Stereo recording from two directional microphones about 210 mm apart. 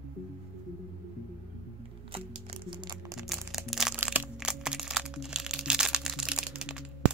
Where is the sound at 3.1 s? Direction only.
Centre (ahead or behind).